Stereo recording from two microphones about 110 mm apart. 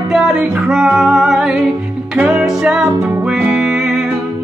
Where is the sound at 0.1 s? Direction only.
5° right (ahead or behind).